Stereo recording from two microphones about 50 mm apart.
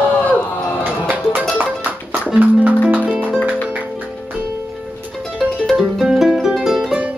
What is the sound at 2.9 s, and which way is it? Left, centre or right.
Music, right.